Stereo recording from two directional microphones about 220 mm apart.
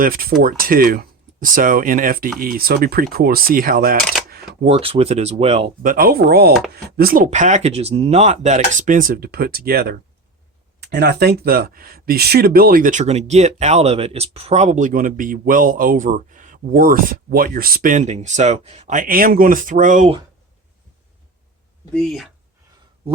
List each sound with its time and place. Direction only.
0.0 s speech: 40° right (ahead or behind)
4.6 s speech: 25° right (ahead or behind)
21.9 s speech: centre (ahead or behind)